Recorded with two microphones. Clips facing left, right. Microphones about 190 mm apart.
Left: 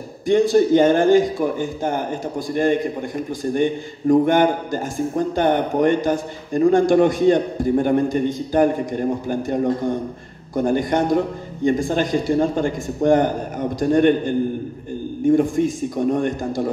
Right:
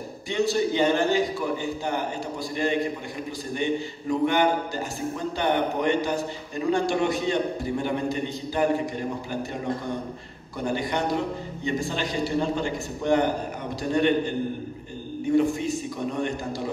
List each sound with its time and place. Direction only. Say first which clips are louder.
0.3 s a man's voice: left 10 dB; 50° left (ahead or behind)